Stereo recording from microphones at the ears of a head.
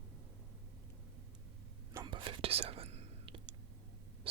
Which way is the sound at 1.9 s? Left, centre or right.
Right.